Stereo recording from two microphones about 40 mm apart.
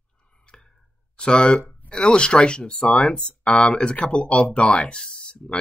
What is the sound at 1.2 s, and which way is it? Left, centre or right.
Speech, left.